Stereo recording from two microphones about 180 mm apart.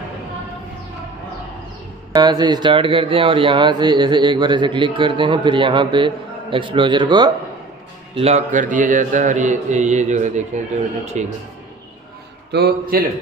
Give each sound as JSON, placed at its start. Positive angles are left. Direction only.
{"t": 2.1, "sound": "speech", "side_deg": -25}
{"t": 8.1, "sound": "speech", "side_deg": -35}
{"t": 12.5, "sound": "a man's voice", "side_deg": -65}